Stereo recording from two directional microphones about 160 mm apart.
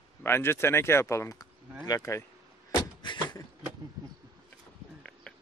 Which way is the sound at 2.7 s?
30° left (ahead or behind).